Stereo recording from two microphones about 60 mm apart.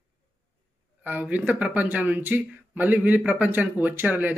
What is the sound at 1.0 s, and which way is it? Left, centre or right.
Speech, right.